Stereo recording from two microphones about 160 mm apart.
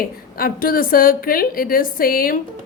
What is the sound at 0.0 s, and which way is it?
A woman's voice, 65° left (ahead or behind).